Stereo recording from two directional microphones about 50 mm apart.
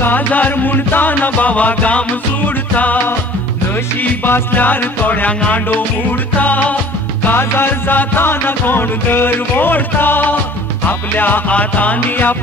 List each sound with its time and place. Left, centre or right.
0.0 s music: left
4.0 s music: left
7.2 s music: left